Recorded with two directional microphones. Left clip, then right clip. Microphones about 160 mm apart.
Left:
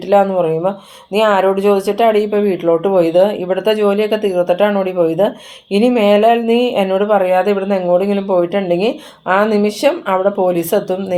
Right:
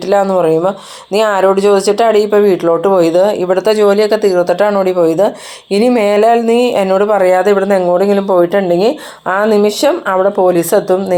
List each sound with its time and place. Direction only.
0.1 s speech: 30° right (ahead or behind)